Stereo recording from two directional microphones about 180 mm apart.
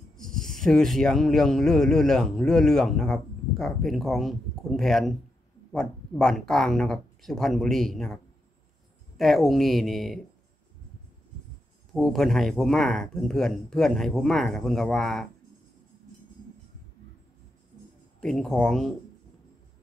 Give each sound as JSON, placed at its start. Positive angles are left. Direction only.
{"t": 0.2, "sound": "speech", "side_deg": 0}
{"t": 11.9, "sound": "speech", "side_deg": 0}
{"t": 18.2, "sound": "speech", "side_deg": 5}